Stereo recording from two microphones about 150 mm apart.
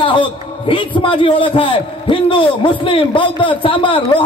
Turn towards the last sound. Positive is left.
turn(degrees=35)  # may be behind; listen again after turning